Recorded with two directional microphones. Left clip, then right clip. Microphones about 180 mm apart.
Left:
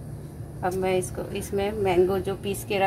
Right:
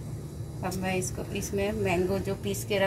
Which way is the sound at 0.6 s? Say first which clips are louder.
Left 7 dB; 60° left (ahead or behind).